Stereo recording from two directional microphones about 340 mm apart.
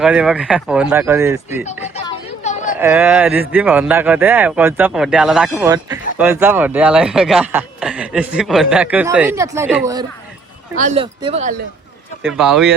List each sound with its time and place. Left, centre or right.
0.0 s speech: centre
2.0 s a sound: centre
2.7 s speech: centre
12.2 s speech: centre